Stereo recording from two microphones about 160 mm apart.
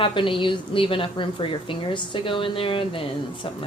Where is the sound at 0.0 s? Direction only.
30° left (ahead or behind).